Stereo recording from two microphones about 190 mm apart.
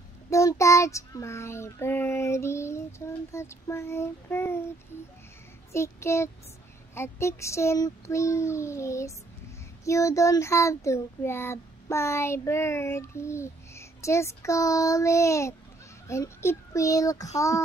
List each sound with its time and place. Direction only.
0.3 s child singing: 15° left (ahead or behind)
5.7 s child singing: 15° left (ahead or behind)